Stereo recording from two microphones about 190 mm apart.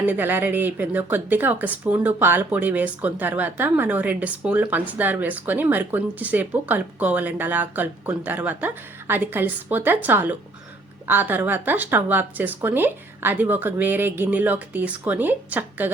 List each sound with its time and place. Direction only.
0.0 s speech: 10° right (ahead or behind)